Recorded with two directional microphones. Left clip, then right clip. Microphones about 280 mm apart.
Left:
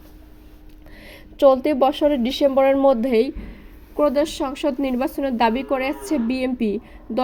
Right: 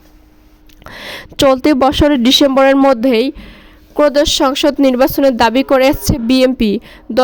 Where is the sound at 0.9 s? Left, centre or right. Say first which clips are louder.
Right 16 dB; right.